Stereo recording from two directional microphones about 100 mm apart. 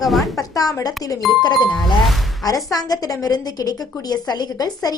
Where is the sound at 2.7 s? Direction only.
40° left (ahead or behind).